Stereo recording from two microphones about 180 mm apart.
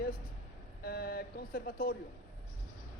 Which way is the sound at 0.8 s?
60° left (ahead or behind).